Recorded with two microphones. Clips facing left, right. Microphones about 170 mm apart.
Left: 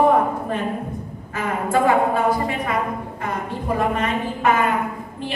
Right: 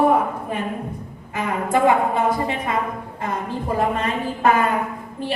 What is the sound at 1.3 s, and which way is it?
A woman's voice, 20° right (ahead or behind).